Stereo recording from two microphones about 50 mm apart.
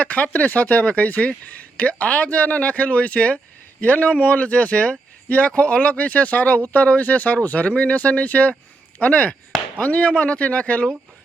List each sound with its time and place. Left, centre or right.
0.0 s speech: left